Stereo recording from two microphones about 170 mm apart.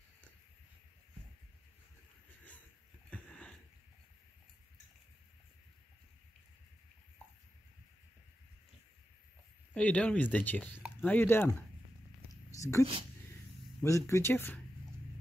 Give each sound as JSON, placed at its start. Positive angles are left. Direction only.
{"t": 3.1, "sound": "sniff", "side_deg": 5}
{"t": 9.8, "sound": "speech", "side_deg": 10}
{"t": 12.5, "sound": "a sound", "side_deg": 20}
{"t": 13.7, "sound": "speech", "side_deg": 20}